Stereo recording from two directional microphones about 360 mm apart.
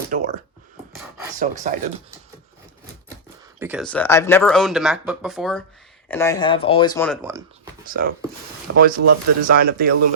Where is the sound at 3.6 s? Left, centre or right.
Centre.